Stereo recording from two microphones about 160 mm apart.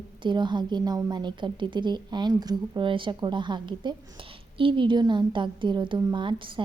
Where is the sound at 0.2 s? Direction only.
30° right (ahead or behind).